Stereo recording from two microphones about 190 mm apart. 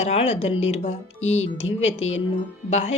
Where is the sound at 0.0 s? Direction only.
35° left (ahead or behind).